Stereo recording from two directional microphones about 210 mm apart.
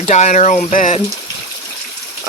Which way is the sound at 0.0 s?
35° left (ahead or behind).